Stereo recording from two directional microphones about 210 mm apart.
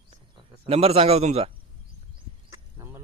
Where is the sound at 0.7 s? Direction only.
30° right (ahead or behind).